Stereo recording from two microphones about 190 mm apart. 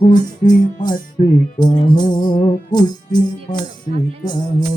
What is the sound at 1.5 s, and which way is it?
Music, 20° left (ahead or behind).